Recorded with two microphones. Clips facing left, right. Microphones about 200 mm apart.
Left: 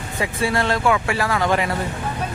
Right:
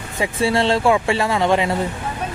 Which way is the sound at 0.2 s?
25° right (ahead or behind).